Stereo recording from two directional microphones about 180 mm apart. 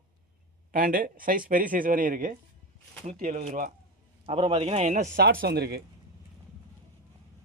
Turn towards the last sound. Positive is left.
turn(degrees=-65)  # may be behind; listen again after turning